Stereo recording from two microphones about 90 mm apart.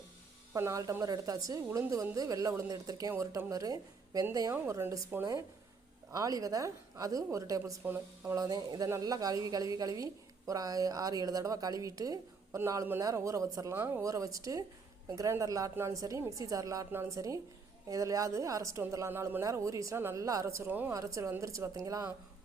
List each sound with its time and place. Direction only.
0.5 s a woman's voice: 35° right (ahead or behind)
4.7 s speech: 30° right (ahead or behind)
5.2 s a woman's voice: 40° right (ahead or behind)
12.5 s a woman's voice: 25° right (ahead or behind)
13.7 s speech: 25° right (ahead or behind)
14.0 s a woman's voice: 40° right (ahead or behind)
20.7 s speech: 20° right (ahead or behind)
20.9 s a woman's voice: 35° right (ahead or behind)